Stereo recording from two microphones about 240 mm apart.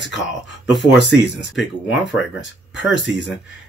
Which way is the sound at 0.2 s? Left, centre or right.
Centre.